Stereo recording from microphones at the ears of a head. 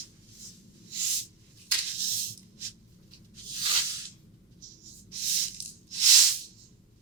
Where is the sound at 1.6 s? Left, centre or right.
Right.